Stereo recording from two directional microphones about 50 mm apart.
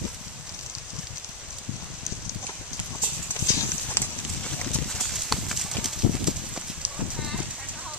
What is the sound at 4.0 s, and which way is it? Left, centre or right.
Clip-clop, left.